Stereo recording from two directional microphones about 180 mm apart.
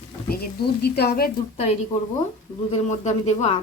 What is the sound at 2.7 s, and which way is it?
Speech, 35° left (ahead or behind).